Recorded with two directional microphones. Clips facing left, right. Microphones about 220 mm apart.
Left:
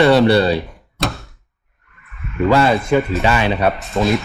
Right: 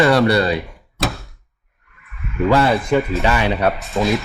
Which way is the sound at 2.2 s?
Centre (ahead or behind).